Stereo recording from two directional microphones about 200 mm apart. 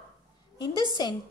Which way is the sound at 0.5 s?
20° left (ahead or behind).